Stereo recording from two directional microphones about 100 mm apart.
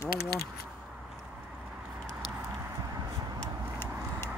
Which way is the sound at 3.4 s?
20° left (ahead or behind).